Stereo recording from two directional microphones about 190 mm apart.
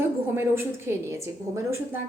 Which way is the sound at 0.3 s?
10° right (ahead or behind).